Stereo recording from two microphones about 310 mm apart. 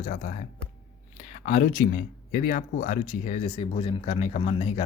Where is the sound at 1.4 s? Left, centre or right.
Left.